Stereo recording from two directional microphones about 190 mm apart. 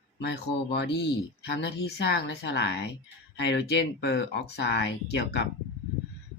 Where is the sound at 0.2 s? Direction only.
65° left (ahead or behind).